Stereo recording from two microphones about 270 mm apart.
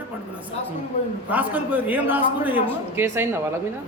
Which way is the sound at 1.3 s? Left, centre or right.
Centre.